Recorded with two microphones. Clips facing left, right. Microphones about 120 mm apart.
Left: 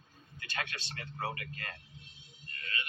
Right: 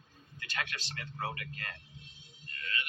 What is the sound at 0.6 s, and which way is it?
Speech, 30° left (ahead or behind).